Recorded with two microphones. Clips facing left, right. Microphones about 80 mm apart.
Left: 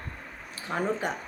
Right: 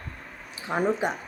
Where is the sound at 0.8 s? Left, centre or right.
Centre.